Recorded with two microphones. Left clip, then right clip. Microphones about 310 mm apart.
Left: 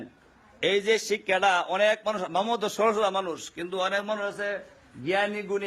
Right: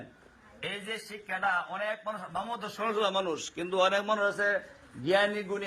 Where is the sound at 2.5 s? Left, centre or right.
Left.